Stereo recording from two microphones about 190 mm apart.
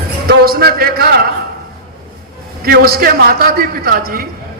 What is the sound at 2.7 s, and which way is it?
A man's voice, 50° right (ahead or behind).